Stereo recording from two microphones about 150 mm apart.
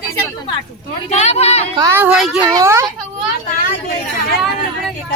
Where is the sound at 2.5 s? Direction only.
20° right (ahead or behind).